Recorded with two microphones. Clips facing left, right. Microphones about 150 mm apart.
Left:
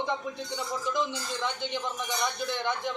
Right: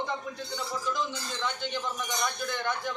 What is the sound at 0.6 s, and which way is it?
A man's voice, 15° left (ahead or behind).